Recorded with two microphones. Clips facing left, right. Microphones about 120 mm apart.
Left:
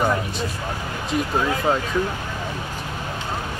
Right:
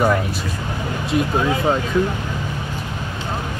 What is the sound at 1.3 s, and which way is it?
Speech, centre (ahead or behind).